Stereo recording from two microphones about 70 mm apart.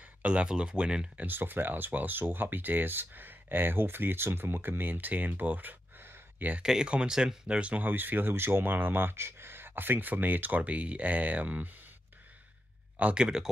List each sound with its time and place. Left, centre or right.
0.2 s speech: centre
1.2 s speech: right
6.6 s speech: centre; by 11.7 s right
13.0 s speech: centre